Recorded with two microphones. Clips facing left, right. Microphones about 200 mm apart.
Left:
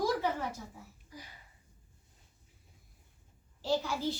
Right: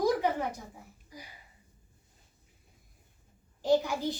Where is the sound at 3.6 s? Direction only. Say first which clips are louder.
Right 6 dB; 15° right (ahead or behind).